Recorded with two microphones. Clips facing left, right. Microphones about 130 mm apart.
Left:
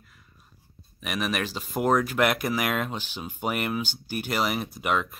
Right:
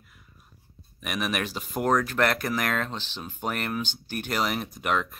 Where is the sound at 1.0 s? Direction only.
Centre (ahead or behind).